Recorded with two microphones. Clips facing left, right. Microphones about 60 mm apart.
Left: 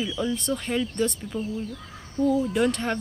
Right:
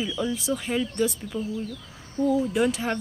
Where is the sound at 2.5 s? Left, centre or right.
Centre.